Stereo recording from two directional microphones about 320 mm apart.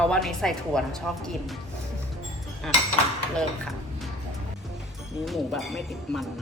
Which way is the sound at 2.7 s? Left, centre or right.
Centre.